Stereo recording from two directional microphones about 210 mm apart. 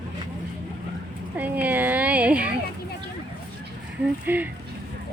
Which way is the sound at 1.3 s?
5° right (ahead or behind).